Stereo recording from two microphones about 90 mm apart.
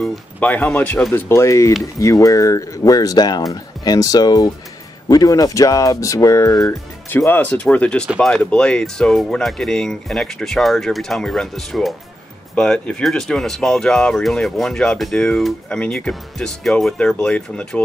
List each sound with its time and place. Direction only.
0.4 s speech: 15° left (ahead or behind)
1.1 s speech: 30° left (ahead or behind)
7.2 s speech: 20° left (ahead or behind)